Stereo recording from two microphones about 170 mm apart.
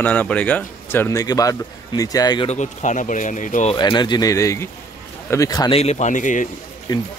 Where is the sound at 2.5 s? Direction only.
45° left (ahead or behind).